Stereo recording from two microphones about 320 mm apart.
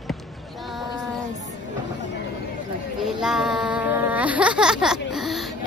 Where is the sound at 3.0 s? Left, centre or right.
Centre.